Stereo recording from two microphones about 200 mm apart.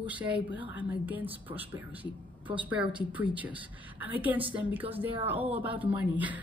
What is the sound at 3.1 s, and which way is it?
Speech, 10° right (ahead or behind).